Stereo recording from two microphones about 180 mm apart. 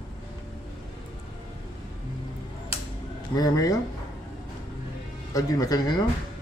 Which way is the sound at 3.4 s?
20° left (ahead or behind).